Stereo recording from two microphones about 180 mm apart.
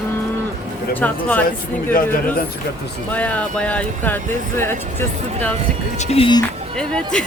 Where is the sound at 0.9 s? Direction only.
10° left (ahead or behind).